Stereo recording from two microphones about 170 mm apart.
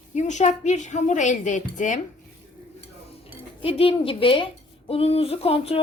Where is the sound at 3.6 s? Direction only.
35° left (ahead or behind).